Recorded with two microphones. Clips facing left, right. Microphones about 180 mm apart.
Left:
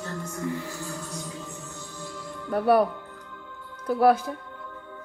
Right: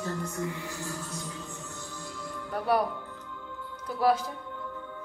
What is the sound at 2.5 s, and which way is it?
Music, 60° left (ahead or behind).